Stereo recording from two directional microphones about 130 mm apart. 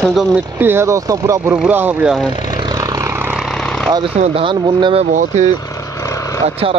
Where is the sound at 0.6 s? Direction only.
20° right (ahead or behind).